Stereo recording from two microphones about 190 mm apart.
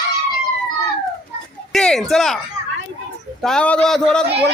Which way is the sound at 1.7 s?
5° left (ahead or behind).